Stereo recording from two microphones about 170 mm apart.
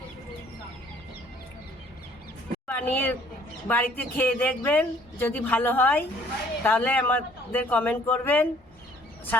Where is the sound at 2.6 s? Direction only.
10° left (ahead or behind).